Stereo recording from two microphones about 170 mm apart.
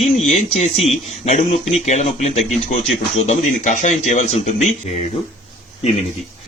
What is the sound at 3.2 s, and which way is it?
Speech, 45° left (ahead or behind).